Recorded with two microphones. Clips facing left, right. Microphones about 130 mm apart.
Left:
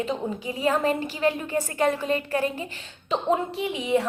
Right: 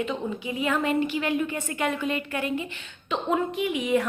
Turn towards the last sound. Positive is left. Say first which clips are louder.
# even
turn(degrees=30)  # may be behind; listen again after turning